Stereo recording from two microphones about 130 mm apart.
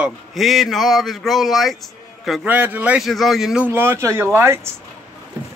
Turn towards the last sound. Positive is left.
turn(degrees=-20)  # may be behind; listen again after turning